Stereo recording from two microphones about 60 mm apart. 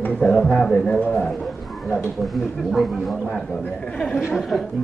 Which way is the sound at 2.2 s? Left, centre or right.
Centre.